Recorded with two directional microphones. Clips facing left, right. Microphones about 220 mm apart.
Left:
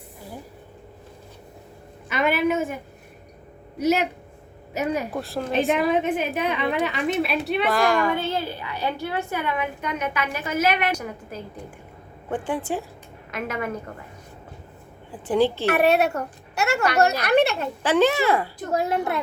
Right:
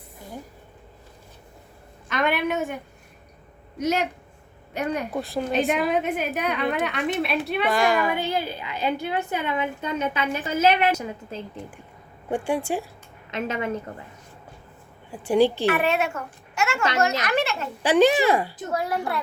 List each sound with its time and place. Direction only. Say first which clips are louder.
2.0 s a woman's voice: left 2 dB; 5° left (ahead or behind)
8.1 s a woman's voice: even; 15° right (ahead or behind)
12.3 s a child's voice: right 2 dB; 10° right (ahead or behind)
13.3 s a woman's voice: right 1 dB; 25° right (ahead or behind)
15.3 s a child's voice: right 1 dB; 15° right (ahead or behind)
15.6 s a woman's voice: left 3 dB; 40° left (ahead or behind)
17.8 s a child's voice: right 2 dB; 15° right (ahead or behind)
18.7 s a child's voice: left 4 dB; 25° left (ahead or behind)